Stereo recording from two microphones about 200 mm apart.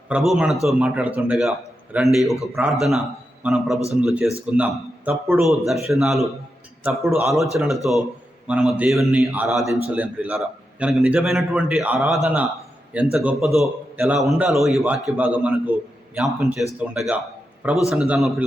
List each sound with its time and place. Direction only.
0.1 s a man's voice: 5° right (ahead or behind)